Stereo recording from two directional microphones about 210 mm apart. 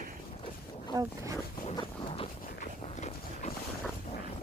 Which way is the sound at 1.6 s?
25° left (ahead or behind).